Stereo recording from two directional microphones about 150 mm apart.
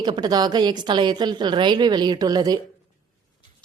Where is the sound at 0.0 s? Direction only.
30° right (ahead or behind).